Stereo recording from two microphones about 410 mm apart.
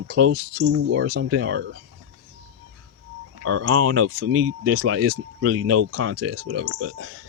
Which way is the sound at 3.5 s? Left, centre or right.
Right.